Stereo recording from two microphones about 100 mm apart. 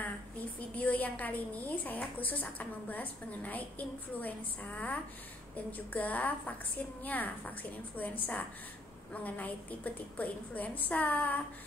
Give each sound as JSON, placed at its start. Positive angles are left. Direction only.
{"t": 0.7, "sound": "a woman's voice", "side_deg": 15}